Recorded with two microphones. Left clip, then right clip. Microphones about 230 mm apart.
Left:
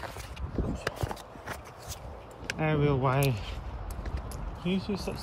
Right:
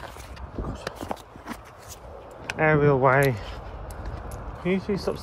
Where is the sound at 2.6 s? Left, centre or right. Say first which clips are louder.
Right 9 dB; right.